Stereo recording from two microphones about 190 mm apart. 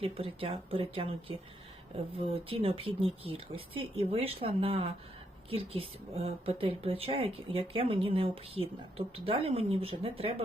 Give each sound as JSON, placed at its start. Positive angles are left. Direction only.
{"t": 0.0, "sound": "speech", "side_deg": -30}